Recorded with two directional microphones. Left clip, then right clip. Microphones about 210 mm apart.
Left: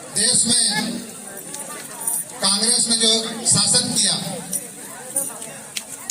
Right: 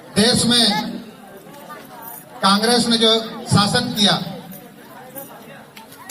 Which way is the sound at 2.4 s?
45° left (ahead or behind).